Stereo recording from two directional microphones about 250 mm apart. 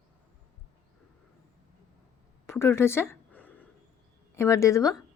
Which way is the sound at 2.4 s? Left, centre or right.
Centre.